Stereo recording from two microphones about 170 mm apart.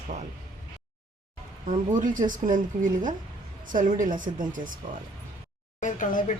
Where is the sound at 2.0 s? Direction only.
50° right (ahead or behind).